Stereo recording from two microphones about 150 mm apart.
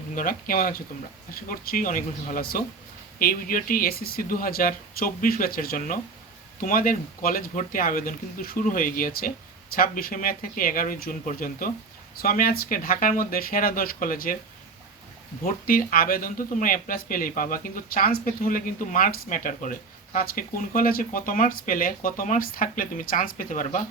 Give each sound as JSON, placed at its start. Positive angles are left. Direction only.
{"t": 0.2, "sound": "speech", "side_deg": 65}
{"t": 15.4, "sound": "speech", "side_deg": 70}
{"t": 20.1, "sound": "speech", "side_deg": 70}